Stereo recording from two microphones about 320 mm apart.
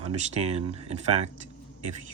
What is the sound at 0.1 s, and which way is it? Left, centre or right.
Speech, centre.